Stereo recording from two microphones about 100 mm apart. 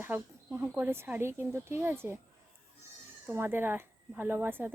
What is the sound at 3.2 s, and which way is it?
Speech, 20° right (ahead or behind).